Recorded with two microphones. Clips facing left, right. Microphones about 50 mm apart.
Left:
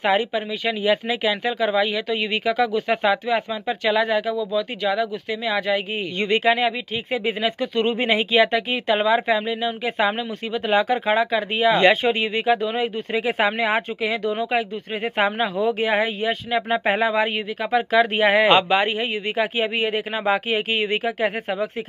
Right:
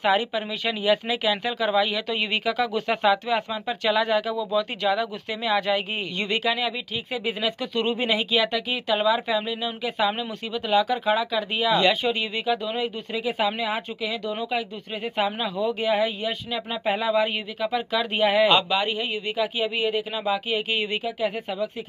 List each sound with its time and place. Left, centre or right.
0.0 s speech: centre
4.4 s speech: centre
6.1 s speech: left